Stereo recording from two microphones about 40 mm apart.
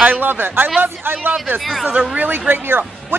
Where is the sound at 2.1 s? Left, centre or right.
Right.